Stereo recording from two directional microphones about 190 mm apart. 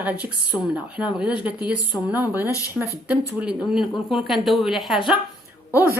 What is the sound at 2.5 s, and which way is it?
Speech, 15° left (ahead or behind).